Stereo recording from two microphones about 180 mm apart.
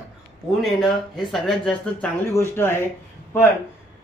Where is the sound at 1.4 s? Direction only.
5° left (ahead or behind).